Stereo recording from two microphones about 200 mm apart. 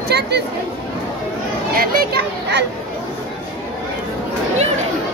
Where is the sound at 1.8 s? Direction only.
50° right (ahead or behind).